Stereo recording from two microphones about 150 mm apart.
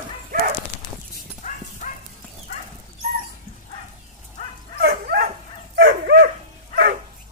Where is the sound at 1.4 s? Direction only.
55° left (ahead or behind).